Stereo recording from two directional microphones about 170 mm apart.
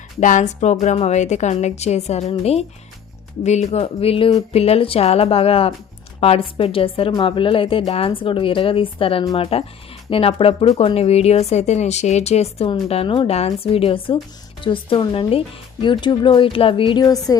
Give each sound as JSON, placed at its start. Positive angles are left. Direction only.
{"t": 0.2, "sound": "a woman's voice", "side_deg": 45}